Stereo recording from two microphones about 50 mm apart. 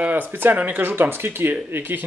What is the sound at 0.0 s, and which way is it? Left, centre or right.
Speech, right.